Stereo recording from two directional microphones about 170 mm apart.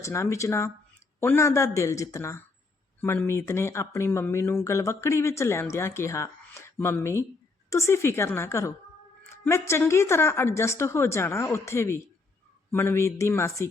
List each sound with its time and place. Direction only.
0.0 s speech: 15° left (ahead or behind)